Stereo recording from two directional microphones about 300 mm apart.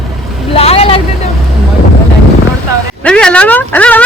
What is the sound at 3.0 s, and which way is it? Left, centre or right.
Speech, centre.